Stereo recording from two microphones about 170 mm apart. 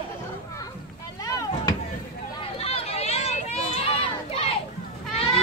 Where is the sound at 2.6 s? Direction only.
35° left (ahead or behind).